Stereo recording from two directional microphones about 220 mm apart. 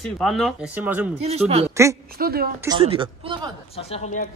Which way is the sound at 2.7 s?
25° right (ahead or behind).